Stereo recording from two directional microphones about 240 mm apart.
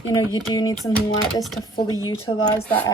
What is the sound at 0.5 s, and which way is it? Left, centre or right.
Speech, centre.